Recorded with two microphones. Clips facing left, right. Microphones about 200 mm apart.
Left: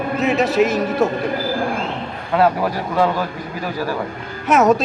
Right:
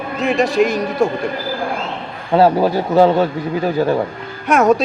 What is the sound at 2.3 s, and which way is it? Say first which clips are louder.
A man's voice: right 4 dB; 30° right (ahead or behind).